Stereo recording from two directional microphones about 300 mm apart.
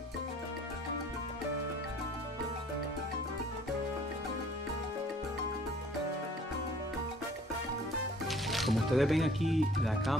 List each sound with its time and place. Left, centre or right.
8.3 s speech: centre